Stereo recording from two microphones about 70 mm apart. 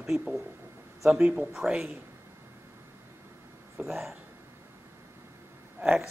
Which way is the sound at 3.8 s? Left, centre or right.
Centre.